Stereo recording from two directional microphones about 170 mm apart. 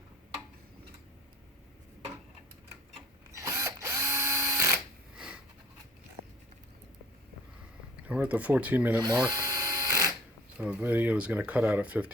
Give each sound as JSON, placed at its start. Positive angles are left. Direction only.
{"t": 3.3, "sound": "drill", "side_deg": -15}
{"t": 5.1, "sound": "sniff", "side_deg": -5}
{"t": 8.0, "sound": "speech", "side_deg": -10}
{"t": 9.0, "sound": "speech", "side_deg": -25}
{"t": 9.3, "sound": "a sound", "side_deg": -20}
{"t": 10.6, "sound": "speech", "side_deg": -10}